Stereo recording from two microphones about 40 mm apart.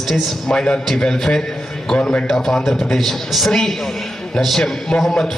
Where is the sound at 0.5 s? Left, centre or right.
Left; by 3.6 s centre.